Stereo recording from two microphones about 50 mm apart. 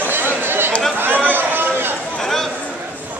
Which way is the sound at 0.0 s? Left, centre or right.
Right.